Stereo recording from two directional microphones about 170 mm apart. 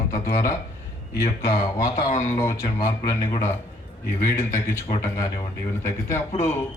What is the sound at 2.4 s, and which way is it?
A man's voice, 20° left (ahead or behind).